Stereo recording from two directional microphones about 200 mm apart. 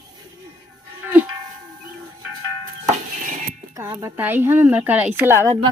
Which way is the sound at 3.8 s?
10° right (ahead or behind).